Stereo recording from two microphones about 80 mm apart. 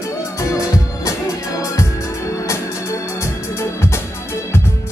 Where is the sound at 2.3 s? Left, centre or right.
Left.